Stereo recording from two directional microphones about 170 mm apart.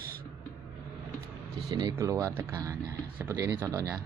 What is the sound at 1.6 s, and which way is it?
Speech, 25° right (ahead or behind).